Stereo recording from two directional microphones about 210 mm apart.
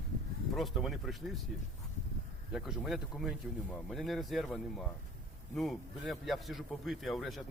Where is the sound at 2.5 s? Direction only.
Centre (ahead or behind).